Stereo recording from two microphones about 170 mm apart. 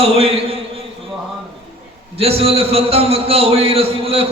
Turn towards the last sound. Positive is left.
turn(degrees=-35)  # may be behind; listen again after turning